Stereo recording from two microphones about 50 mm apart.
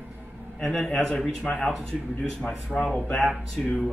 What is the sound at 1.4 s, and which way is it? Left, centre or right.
Speech, centre.